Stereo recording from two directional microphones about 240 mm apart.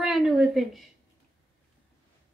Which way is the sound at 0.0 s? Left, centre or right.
Centre.